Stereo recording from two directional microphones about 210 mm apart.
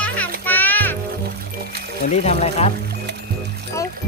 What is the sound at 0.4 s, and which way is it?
Music, 10° left (ahead or behind).